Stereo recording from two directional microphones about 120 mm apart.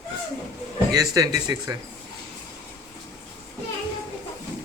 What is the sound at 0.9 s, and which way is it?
Speech, 30° right (ahead or behind).